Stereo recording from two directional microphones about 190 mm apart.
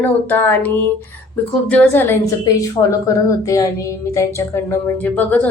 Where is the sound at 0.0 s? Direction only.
10° left (ahead or behind).